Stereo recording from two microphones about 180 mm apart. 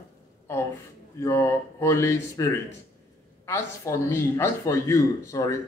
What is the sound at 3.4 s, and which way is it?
Speech, 15° left (ahead or behind).